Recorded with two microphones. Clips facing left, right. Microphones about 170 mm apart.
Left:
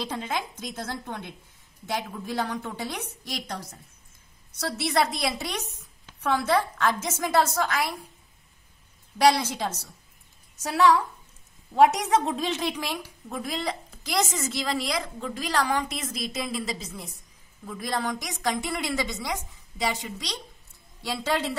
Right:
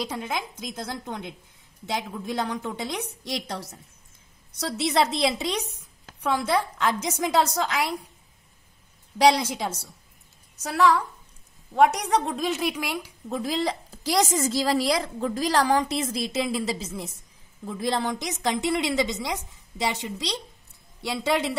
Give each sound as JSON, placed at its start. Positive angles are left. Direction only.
{"t": 0.0, "sound": "a woman's voice", "side_deg": -10}
{"t": 4.6, "sound": "a woman's voice", "side_deg": -20}
{"t": 9.2, "sound": "a woman's voice", "side_deg": -15}
{"t": 10.6, "sound": "a woman's voice", "side_deg": 0}
{"t": 13.3, "sound": "a woman's voice", "side_deg": -30}